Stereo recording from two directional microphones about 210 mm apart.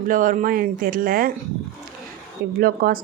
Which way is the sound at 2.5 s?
45° right (ahead or behind).